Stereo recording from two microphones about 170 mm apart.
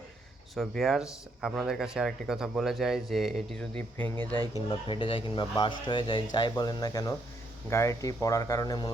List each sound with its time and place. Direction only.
0.5 s speech: centre (ahead or behind)
3.9 s speech: 10° left (ahead or behind)
4.7 s speech: 30° left (ahead or behind)